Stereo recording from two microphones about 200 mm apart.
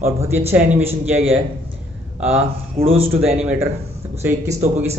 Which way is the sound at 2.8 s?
10° right (ahead or behind).